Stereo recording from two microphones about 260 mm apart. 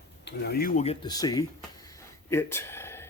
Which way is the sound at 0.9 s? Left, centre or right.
Centre.